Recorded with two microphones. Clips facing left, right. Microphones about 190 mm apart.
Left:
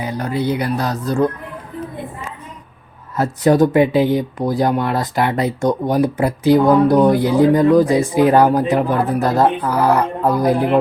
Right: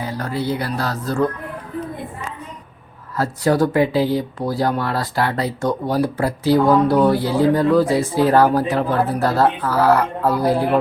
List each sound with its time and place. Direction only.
0.0 s speech: 20° left (ahead or behind)
3.2 s speech: 20° left (ahead or behind)